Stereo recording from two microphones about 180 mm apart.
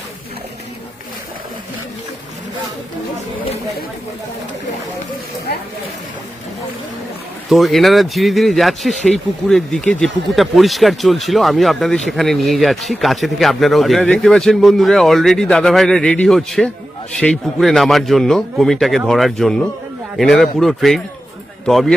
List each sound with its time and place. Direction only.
7.5 s speech: centre (ahead or behind)